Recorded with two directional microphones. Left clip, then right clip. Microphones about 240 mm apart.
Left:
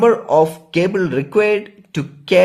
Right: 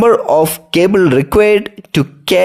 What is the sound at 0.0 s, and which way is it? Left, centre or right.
Speech, right.